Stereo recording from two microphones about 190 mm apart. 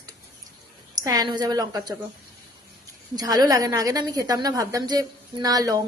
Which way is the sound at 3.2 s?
20° right (ahead or behind).